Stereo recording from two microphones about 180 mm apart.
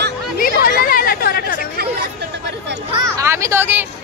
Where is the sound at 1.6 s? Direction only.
60° right (ahead or behind).